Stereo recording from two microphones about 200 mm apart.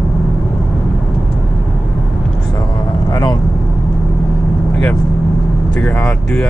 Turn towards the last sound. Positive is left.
turn(degrees=5)  # may be behind; listen again after turning